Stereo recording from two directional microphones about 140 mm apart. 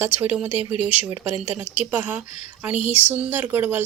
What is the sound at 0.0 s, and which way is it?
Speech, 10° right (ahead or behind).